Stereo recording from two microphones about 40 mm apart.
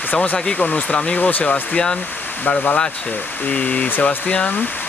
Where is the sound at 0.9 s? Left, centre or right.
Left.